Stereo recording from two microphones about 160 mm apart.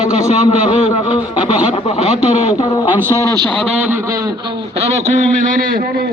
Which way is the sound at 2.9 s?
15° right (ahead or behind).